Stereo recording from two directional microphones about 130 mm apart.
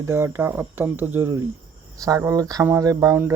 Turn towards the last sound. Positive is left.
turn(degrees=-20)  # may be behind; listen again after turning